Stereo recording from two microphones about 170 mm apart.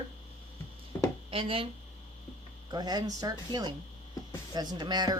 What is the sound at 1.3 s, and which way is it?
Speech, 35° right (ahead or behind).